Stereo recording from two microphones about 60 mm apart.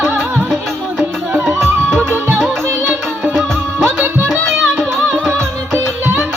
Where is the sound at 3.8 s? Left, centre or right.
Right.